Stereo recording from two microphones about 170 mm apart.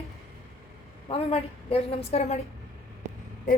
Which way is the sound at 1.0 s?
35° left (ahead or behind).